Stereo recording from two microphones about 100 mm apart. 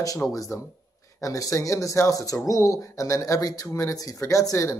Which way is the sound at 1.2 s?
35° left (ahead or behind).